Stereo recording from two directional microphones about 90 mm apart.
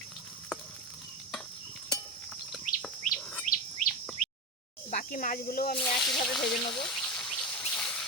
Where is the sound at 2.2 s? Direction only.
5° left (ahead or behind).